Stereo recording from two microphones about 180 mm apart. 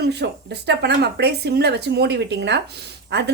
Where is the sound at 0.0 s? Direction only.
70° right (ahead or behind).